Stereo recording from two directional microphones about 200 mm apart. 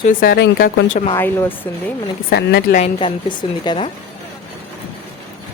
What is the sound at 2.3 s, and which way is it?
Speech, 55° left (ahead or behind).